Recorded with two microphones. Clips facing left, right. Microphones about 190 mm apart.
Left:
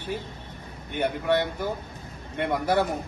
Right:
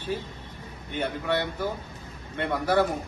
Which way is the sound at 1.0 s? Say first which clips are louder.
Left 3 dB; 15° left (ahead or behind).